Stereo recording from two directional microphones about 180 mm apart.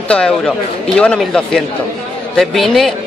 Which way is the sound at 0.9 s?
5° left (ahead or behind).